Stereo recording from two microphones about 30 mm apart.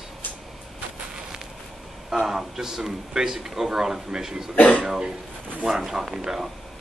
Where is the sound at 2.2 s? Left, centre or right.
Centre.